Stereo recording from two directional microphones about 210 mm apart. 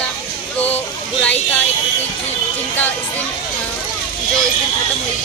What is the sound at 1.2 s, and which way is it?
Speech, 5° left (ahead or behind).